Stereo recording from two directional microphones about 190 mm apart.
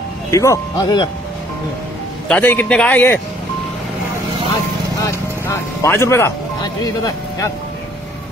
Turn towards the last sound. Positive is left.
turn(degrees=20)  # may be behind; listen again after turning